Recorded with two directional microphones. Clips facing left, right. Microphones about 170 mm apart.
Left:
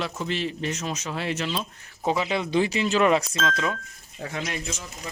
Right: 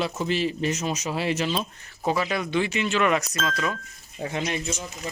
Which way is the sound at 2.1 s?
20° left (ahead or behind).